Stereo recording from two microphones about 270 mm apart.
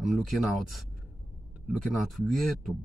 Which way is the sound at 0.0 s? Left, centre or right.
Centre.